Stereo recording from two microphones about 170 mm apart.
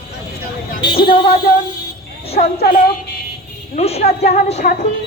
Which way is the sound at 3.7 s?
40° left (ahead or behind).